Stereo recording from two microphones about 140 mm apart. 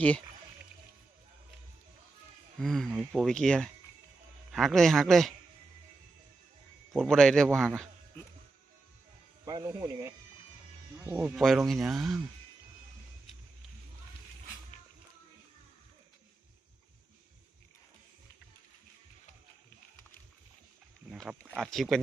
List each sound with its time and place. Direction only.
2.6 s speech: 5° left (ahead or behind)
6.9 s speech: centre (ahead or behind)
9.5 s speech: 25° right (ahead or behind)
11.3 s speech: centre (ahead or behind)
21.1 s speech: 5° right (ahead or behind)